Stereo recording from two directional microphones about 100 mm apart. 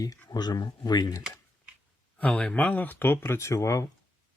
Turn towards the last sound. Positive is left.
turn(degrees=30)  # may be behind; listen again after turning